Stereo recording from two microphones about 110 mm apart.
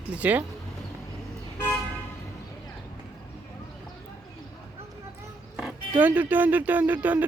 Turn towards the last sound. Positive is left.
turn(degrees=-15)  # may be behind; listen again after turning